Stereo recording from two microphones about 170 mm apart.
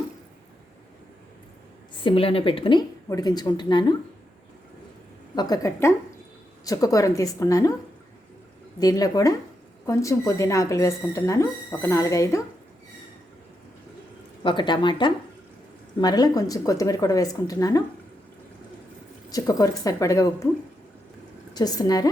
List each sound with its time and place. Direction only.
2.0 s speech: 35° left (ahead or behind)
5.3 s speech: 25° left (ahead or behind)
8.8 s speech: 20° left (ahead or behind)
14.4 s speech: 25° left (ahead or behind)
19.3 s speech: 20° left (ahead or behind)
21.5 s speech: 25° left (ahead or behind)